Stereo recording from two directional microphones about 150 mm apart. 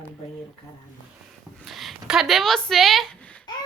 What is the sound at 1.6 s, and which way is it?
Speech, centre (ahead or behind).